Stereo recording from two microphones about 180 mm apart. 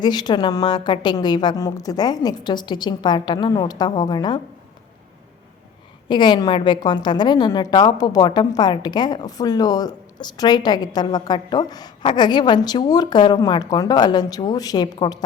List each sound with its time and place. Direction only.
0.0 s a woman's voice: 25° left (ahead or behind)
6.1 s a woman's voice: 25° left (ahead or behind)